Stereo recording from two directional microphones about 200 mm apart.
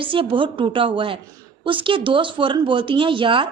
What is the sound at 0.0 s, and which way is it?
Speech, 25° right (ahead or behind).